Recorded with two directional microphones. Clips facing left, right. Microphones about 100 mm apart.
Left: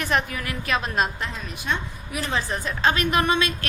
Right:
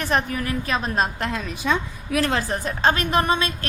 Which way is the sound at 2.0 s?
80° right.